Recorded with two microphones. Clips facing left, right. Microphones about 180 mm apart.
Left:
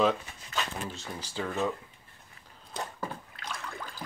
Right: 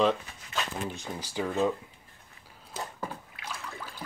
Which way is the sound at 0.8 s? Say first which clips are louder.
Right 3 dB; 15° right (ahead or behind).